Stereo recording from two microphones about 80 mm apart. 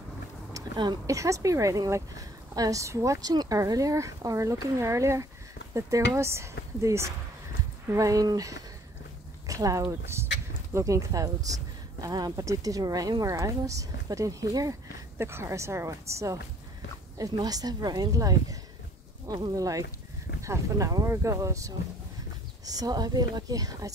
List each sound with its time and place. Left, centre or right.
0.6 s a sound: right
1.0 s speech: right
15.1 s speech: right
17.2 s speech: right
22.7 s speech: right